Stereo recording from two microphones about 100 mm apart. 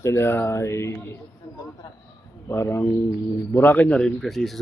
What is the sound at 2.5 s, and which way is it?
Speech, 25° left (ahead or behind).